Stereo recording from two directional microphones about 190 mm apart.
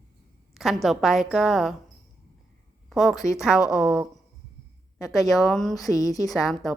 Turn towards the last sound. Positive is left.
turn(degrees=0)  # may be behind; listen again after turning